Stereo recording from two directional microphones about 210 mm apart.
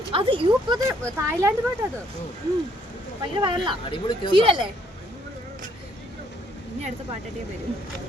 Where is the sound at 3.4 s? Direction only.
20° right (ahead or behind).